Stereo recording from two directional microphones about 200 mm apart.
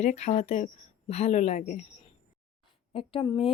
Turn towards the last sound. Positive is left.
turn(degrees=25)  # may be behind; listen again after turning